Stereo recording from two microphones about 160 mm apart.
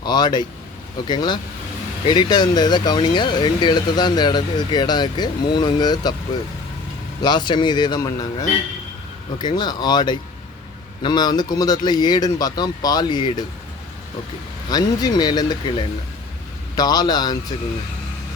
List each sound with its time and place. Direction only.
0.0 s speech: 25° left (ahead or behind)
7.2 s speech: 30° left (ahead or behind)
14.7 s speech: 25° left (ahead or behind)